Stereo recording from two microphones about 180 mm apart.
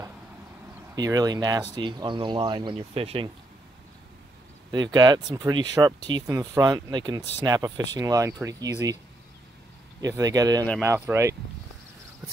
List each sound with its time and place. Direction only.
0.9 s speech: 20° right (ahead or behind)
4.6 s speech: 25° right (ahead or behind)
9.9 s speech: 20° right (ahead or behind)